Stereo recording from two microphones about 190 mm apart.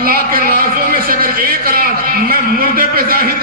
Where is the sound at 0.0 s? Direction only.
50° right (ahead or behind).